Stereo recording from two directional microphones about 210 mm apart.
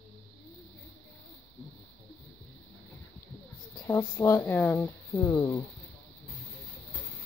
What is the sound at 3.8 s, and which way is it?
Speech, 15° left (ahead or behind).